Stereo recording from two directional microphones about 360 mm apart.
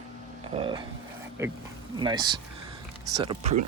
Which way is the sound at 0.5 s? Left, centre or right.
Centre.